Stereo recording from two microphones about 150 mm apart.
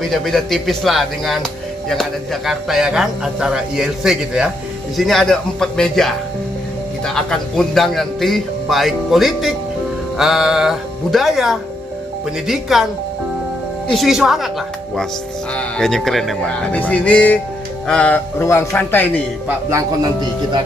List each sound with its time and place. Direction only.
0.0 s speech: centre (ahead or behind)
7.2 s speech: 5° left (ahead or behind)
13.8 s speech: centre (ahead or behind)
15.5 s speech: 5° left (ahead or behind)
18.4 s speech: 20° left (ahead or behind)
19.7 s a man's voice: 25° right (ahead or behind)